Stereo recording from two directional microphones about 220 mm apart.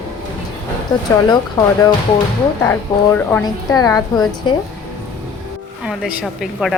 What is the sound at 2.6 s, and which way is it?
A woman's voice, 10° left (ahead or behind).